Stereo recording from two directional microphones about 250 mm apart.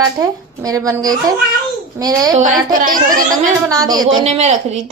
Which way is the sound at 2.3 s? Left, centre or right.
Right.